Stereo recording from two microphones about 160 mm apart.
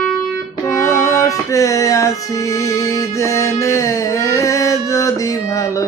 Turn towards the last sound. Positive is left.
turn(degrees=20)  # may be behind; listen again after turning